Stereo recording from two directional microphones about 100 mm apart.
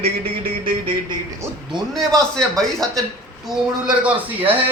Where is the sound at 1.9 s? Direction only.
5° left (ahead or behind).